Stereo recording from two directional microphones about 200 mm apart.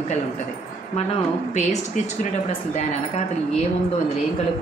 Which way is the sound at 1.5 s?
35° left (ahead or behind).